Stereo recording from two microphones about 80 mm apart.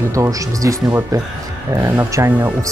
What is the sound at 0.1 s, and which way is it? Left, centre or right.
Speech, right.